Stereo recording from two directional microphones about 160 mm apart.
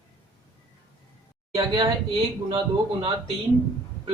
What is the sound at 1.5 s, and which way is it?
Speech, 25° right (ahead or behind).